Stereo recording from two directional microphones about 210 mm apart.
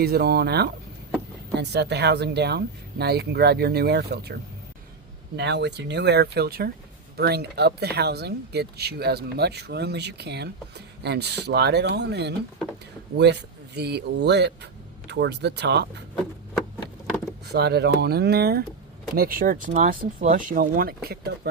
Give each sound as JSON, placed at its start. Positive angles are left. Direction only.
{"t": 0.0, "sound": "speech", "side_deg": -50}
{"t": 5.4, "sound": "speech", "side_deg": -55}
{"t": 17.4, "sound": "speech", "side_deg": -50}